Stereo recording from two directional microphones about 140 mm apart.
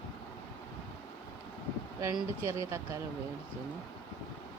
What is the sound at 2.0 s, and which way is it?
Speech, 20° right (ahead or behind).